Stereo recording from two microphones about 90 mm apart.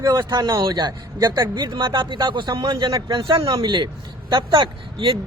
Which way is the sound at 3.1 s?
75° right (ahead or behind).